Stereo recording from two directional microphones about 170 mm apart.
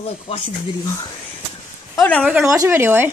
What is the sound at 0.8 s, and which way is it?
Speech, 20° left (ahead or behind).